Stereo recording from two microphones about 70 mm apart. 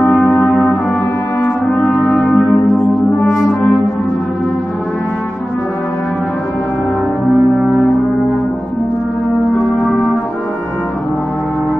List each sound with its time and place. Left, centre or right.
0.0 s brass instrument: centre
2.2 s church bell: centre
3.0 s brass instrument: centre